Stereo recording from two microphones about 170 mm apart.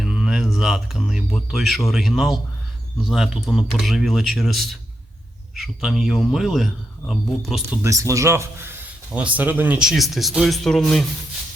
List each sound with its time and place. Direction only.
0.0 s speech: centre (ahead or behind)
7.9 s speech: 20° right (ahead or behind); by 11.0 s 5° left (ahead or behind)